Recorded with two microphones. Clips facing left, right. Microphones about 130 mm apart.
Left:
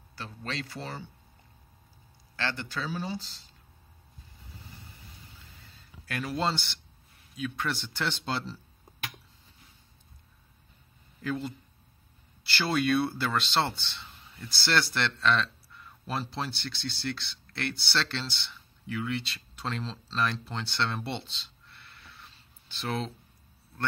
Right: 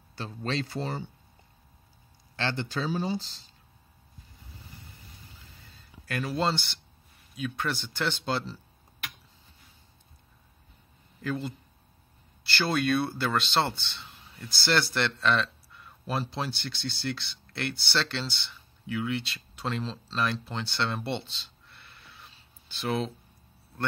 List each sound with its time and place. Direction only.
0.1 s a man's voice: 30° right (ahead or behind)
2.3 s a man's voice: 25° right (ahead or behind)
6.0 s speech: centre (ahead or behind)
11.2 s speech: centre (ahead or behind)
22.7 s speech: 5° right (ahead or behind)